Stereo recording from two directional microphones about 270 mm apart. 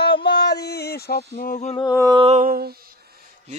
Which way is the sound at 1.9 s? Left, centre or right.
Centre.